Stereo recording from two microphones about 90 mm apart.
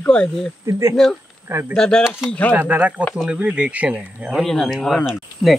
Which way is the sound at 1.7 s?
10° left (ahead or behind).